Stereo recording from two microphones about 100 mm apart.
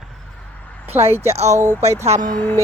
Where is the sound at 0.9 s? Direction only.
90° right.